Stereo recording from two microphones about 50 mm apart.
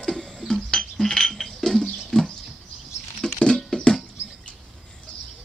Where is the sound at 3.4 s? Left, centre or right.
Centre.